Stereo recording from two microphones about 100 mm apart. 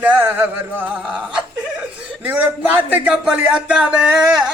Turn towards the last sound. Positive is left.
turn(degrees=-5)  # may be behind; listen again after turning